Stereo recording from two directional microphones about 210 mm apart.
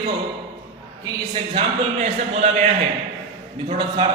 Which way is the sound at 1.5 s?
30° right (ahead or behind).